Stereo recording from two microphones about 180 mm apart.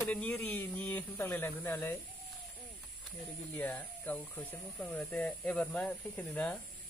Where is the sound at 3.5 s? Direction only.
10° left (ahead or behind).